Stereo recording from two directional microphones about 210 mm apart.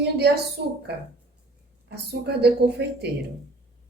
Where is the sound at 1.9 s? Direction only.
50° right (ahead or behind).